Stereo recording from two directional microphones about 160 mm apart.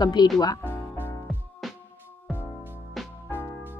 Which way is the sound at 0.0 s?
25° left (ahead or behind).